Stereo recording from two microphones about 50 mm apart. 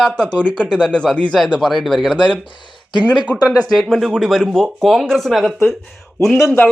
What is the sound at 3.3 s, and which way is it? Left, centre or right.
Speech, left.